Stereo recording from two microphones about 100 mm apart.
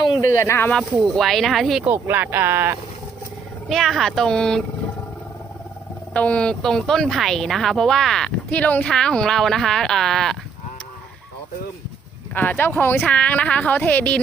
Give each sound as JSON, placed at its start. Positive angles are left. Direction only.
{"t": 0.2, "sound": "speech", "side_deg": 30}
{"t": 1.0, "sound": "speech", "side_deg": 5}
{"t": 1.8, "sound": "speech", "side_deg": -20}
{"t": 3.7, "sound": "speech", "side_deg": 0}
{"t": 6.1, "sound": "speech", "side_deg": 10}
{"t": 12.3, "sound": "speech", "side_deg": 20}